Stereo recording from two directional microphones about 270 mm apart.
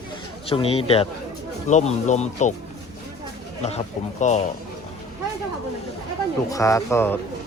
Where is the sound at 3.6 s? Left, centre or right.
Left.